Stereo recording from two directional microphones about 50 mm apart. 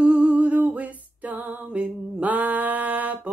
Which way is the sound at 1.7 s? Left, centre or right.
Right.